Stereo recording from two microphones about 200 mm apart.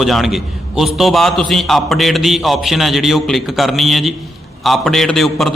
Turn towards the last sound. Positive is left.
turn(degrees=0)  # may be behind; listen again after turning